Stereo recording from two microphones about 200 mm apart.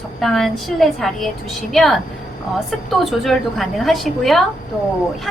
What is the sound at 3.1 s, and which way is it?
A woman's voice, centre (ahead or behind).